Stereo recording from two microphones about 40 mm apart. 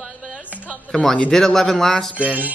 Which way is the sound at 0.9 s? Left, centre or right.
Centre.